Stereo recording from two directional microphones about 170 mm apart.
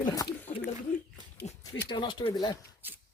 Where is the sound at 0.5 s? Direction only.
45° left (ahead or behind).